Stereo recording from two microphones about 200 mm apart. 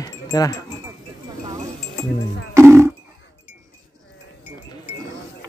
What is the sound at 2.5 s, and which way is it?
Livestock, 15° right (ahead or behind).